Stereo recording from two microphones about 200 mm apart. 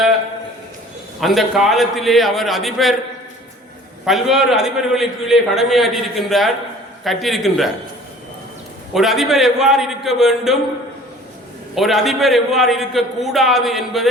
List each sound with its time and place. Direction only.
1.2 s a man's voice: centre (ahead or behind)
4.0 s a man's voice: centre (ahead or behind)
8.9 s a man's voice: centre (ahead or behind)
11.7 s a man's voice: centre (ahead or behind)